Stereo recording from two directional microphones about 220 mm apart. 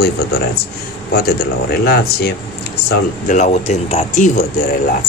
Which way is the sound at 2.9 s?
35° left (ahead or behind).